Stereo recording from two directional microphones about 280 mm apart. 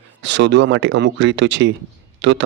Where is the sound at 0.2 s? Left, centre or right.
Right.